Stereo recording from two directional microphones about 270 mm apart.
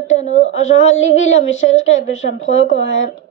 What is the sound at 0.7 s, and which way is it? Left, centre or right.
A child's voice, left.